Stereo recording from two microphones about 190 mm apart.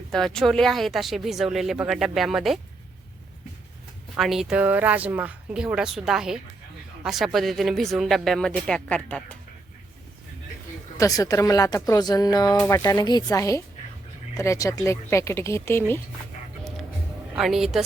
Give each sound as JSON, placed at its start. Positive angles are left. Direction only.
{"t": 0.1, "sound": "speech", "side_deg": 0}
{"t": 4.2, "sound": "speech", "side_deg": 0}
{"t": 10.9, "sound": "speech", "side_deg": 20}
{"t": 17.3, "sound": "speech", "side_deg": 0}